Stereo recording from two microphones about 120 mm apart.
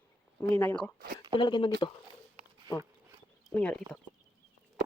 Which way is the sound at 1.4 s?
40° left (ahead or behind).